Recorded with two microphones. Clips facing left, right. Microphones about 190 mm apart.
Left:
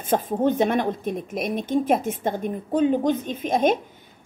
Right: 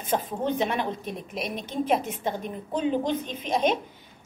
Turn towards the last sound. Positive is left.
turn(degrees=50)  # may be behind; listen again after turning